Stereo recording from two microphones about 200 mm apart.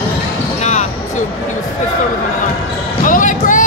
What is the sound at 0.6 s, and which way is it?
Basketball bounce, 35° left (ahead or behind).